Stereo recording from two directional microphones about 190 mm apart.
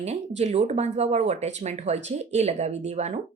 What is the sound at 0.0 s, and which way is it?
A woman's voice, 35° right (ahead or behind).